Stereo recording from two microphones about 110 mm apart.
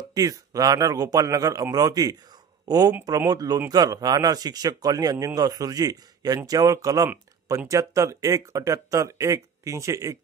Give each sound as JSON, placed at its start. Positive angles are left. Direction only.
{"t": 0.1, "sound": "speech", "side_deg": -35}